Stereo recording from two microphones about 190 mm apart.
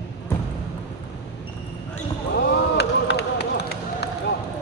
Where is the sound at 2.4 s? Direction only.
65° left (ahead or behind).